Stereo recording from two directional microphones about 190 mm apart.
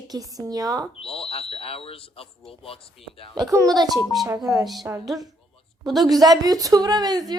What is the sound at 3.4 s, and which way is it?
Speech, 20° right (ahead or behind).